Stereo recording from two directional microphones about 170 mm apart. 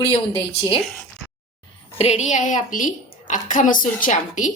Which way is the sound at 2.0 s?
40° left (ahead or behind).